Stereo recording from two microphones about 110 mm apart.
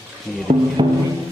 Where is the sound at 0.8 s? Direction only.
50° right (ahead or behind).